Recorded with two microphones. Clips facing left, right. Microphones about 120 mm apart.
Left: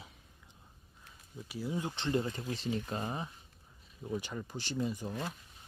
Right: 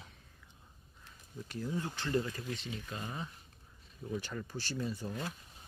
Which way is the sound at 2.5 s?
35° left (ahead or behind).